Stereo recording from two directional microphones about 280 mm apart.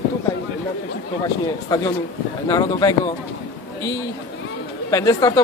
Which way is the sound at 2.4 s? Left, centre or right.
Centre.